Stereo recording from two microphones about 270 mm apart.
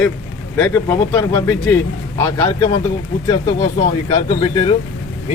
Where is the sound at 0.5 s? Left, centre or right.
Centre.